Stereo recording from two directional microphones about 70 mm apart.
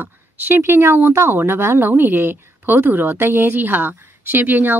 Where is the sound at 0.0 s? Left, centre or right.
Right.